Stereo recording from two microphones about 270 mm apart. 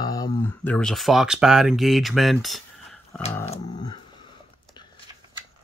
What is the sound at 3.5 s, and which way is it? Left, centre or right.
Dog, centre.